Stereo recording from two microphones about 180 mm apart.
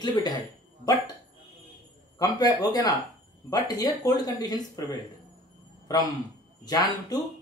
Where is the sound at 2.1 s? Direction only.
20° left (ahead or behind).